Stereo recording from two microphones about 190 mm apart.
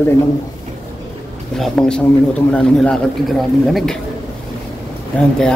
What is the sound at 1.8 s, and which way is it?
Speech, 5° left (ahead or behind).